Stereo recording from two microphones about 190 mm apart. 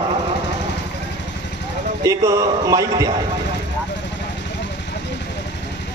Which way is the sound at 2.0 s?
15° right (ahead or behind).